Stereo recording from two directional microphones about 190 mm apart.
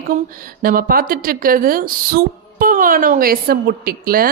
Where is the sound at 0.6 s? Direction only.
50° right (ahead or behind).